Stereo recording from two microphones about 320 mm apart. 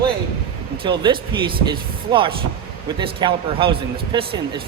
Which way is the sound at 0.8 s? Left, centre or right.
Centre.